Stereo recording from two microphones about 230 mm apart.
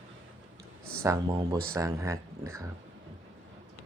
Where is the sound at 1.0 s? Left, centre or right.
Centre.